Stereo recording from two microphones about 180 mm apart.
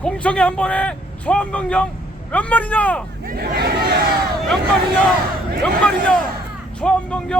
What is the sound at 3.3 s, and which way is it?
Speech, 60° right (ahead or behind).